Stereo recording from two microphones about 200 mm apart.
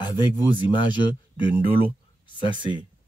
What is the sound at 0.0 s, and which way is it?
Speech, 20° left (ahead or behind).